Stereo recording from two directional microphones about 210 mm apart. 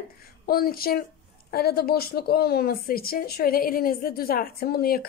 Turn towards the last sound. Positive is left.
turn(degrees=45)  # may be behind; listen again after turning